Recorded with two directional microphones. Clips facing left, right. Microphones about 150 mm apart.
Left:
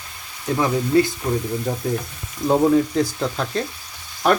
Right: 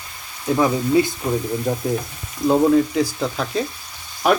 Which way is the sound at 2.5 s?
Centre (ahead or behind).